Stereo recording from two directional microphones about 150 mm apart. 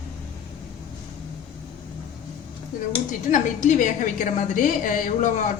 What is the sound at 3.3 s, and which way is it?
A woman's voice, 60° left (ahead or behind).